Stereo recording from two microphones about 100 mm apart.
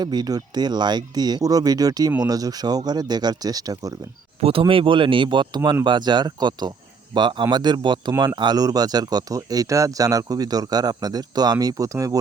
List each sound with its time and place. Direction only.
0.0 s speech: 45° right (ahead or behind)
4.4 s speech: 75° right (ahead or behind)
4.6 s speech: 60° right (ahead or behind); by 12.2 s 35° right (ahead or behind)